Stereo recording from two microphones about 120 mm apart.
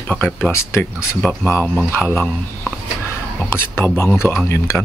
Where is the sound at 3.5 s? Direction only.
15° left (ahead or behind).